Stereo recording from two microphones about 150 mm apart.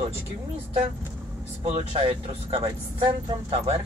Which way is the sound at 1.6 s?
45° right (ahead or behind).